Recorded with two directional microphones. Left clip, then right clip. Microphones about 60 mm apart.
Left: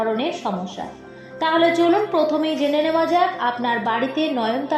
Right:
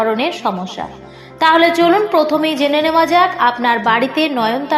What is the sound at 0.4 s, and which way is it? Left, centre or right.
Speech, right.